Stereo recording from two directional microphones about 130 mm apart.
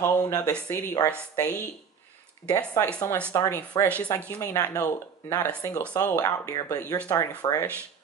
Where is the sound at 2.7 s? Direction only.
25° left (ahead or behind).